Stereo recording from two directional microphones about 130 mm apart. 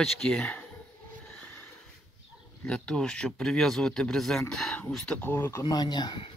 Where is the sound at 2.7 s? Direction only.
5° left (ahead or behind).